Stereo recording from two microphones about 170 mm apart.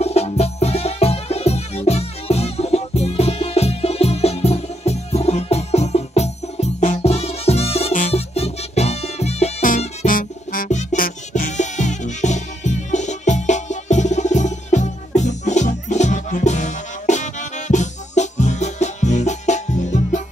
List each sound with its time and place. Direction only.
0.0 s music: 40° left (ahead or behind)